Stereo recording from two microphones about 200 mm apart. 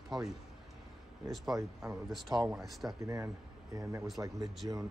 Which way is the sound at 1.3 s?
Centre (ahead or behind).